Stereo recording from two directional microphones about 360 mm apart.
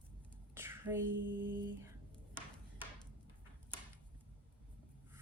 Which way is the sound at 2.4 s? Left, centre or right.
Centre.